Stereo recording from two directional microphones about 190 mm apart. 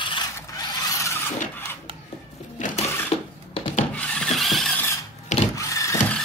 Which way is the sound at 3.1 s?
30° left (ahead or behind).